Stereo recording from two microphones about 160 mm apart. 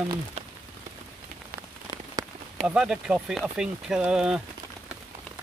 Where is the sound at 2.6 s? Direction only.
5° right (ahead or behind).